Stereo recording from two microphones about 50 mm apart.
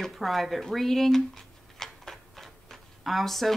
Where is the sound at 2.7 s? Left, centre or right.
Centre.